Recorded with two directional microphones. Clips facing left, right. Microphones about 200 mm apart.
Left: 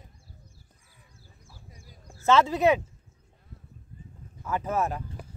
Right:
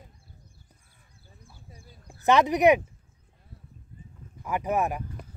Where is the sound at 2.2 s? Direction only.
15° right (ahead or behind).